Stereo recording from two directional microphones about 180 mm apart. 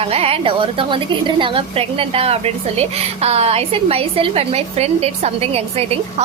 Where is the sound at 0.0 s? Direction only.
35° right (ahead or behind).